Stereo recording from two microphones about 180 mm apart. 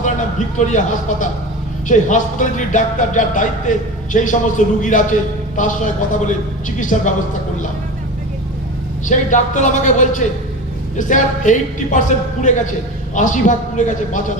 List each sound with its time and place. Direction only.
0.0 s a sound: 45° left (ahead or behind)
1.9 s speech: 45° left (ahead or behind)
9.0 s speech: 45° left (ahead or behind)